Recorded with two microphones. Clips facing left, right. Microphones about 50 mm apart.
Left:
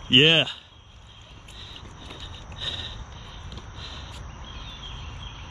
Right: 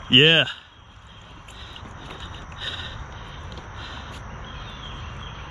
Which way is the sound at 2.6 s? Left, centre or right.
Centre.